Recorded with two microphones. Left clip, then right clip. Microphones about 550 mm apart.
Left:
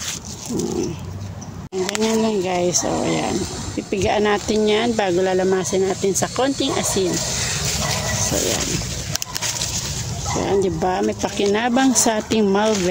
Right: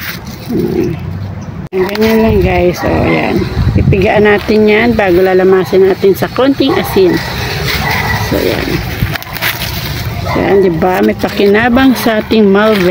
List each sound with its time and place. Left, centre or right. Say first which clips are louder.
1.9 s speech: right 9 dB; left
10.4 s speech: right 11 dB; left